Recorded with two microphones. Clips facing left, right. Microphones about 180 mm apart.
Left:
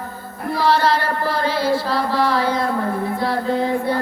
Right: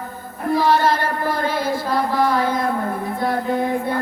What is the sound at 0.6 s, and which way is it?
Music, 45° right (ahead or behind).